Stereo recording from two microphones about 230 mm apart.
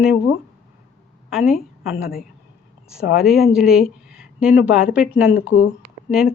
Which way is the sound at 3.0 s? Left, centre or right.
Left.